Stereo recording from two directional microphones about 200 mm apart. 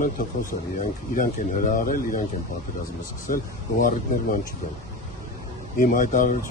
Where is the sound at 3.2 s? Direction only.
45° left (ahead or behind).